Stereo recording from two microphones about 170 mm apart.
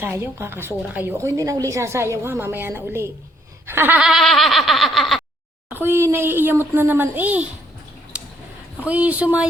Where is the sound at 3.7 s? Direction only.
10° right (ahead or behind).